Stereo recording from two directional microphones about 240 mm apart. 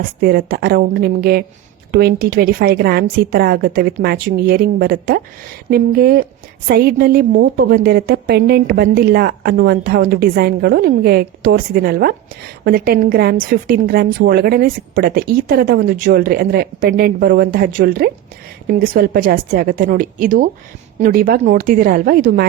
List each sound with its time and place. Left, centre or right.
0.2 s a woman's voice: right